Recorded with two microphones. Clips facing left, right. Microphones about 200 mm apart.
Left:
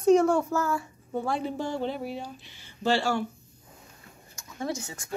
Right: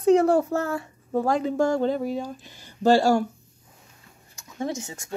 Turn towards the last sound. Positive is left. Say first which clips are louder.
# right 2 dB
turn(degrees=-25)  # may be behind; listen again after turning